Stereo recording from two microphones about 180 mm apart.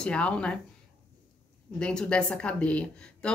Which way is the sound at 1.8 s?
5° left (ahead or behind).